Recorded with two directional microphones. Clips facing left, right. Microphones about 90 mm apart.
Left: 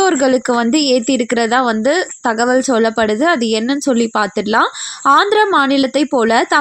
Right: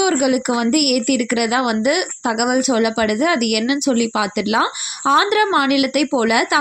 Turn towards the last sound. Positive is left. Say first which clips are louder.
# left 4 dB
turn(degrees=40)  # may be behind; listen again after turning